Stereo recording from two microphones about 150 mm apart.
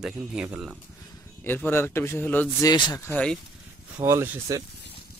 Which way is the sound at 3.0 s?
10° left (ahead or behind).